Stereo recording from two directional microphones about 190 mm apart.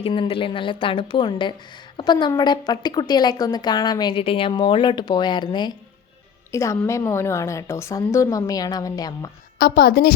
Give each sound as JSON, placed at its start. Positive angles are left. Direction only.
{"t": 0.0, "sound": "a woman's voice", "side_deg": 30}
{"t": 9.6, "sound": "a woman's voice", "side_deg": 55}